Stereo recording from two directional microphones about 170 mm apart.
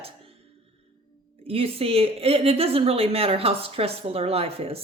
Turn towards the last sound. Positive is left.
turn(degrees=-35)  # may be behind; listen again after turning